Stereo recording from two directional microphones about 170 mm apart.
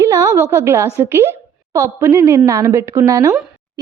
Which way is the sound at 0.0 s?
20° right (ahead or behind).